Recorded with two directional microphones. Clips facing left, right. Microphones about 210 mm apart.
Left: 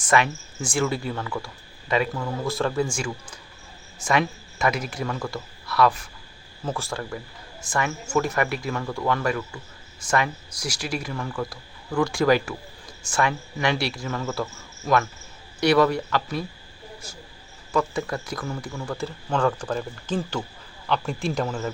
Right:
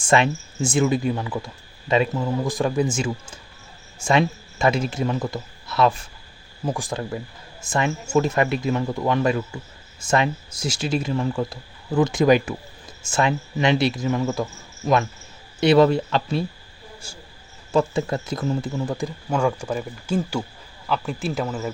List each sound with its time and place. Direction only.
0.1 s a man's voice: 25° right (ahead or behind)
17.7 s speech: 25° right (ahead or behind); by 21.7 s 5° right (ahead or behind)